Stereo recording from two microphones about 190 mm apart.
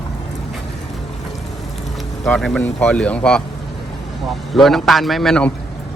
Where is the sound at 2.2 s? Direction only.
Centre (ahead or behind).